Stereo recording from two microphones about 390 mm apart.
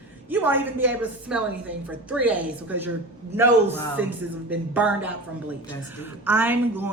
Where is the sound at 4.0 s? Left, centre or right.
Centre.